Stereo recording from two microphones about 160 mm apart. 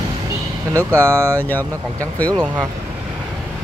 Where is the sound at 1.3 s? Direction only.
10° left (ahead or behind).